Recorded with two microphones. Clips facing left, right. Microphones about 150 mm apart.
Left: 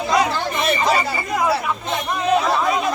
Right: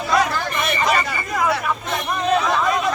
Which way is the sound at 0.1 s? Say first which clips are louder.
Even; 25° left (ahead or behind).